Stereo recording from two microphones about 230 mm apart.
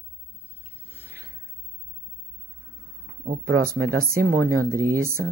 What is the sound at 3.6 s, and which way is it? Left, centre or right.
Speech, right.